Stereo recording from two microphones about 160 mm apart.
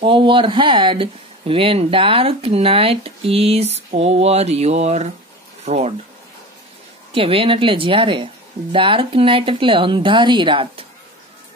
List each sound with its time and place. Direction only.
0.0 s speech: 30° right (ahead or behind)
7.2 s speech: 35° right (ahead or behind)